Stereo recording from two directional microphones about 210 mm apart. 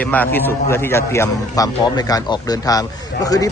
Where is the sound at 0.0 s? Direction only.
10° left (ahead or behind).